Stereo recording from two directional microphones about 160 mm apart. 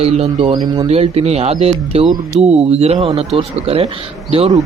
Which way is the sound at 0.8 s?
40° right (ahead or behind).